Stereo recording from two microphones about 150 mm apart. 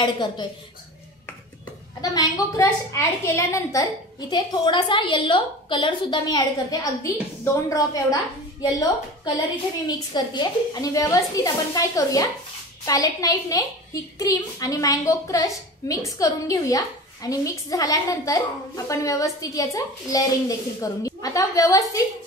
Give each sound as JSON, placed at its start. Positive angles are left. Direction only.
{"t": 0.0, "sound": "a woman's voice", "side_deg": 30}
{"t": 2.0, "sound": "a woman's voice", "side_deg": 25}
{"t": 4.3, "sound": "a woman's voice", "side_deg": 30}
{"t": 9.8, "sound": "a woman's voice", "side_deg": 25}